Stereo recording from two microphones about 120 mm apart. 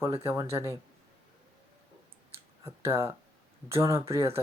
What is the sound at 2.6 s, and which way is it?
Speech, 20° right (ahead or behind).